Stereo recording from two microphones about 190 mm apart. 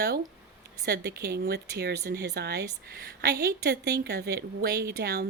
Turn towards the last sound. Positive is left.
turn(degrees=-55)  # may be behind; listen again after turning